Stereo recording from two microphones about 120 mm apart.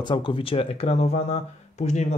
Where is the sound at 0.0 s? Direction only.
40° left (ahead or behind).